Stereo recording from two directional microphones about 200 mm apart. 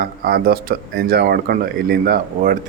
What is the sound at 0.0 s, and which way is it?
Speech, 50° right (ahead or behind).